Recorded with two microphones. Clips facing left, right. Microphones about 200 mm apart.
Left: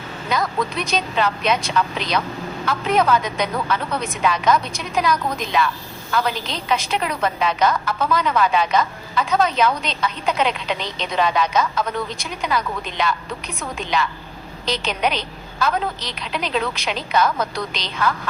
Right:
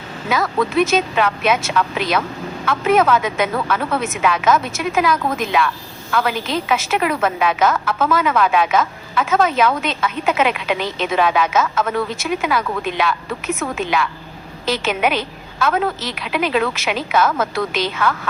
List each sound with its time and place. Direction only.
0.3 s a woman's voice: 5° right (ahead or behind)